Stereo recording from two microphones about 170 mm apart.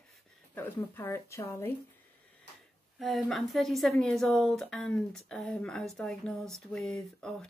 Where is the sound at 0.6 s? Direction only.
15° left (ahead or behind).